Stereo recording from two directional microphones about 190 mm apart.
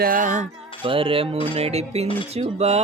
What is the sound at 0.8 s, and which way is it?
Music, 30° right (ahead or behind).